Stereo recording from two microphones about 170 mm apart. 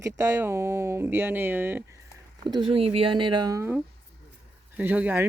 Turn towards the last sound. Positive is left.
turn(degrees=-10)  # may be behind; listen again after turning